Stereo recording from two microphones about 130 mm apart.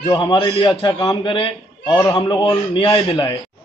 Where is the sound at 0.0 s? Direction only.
35° left (ahead or behind).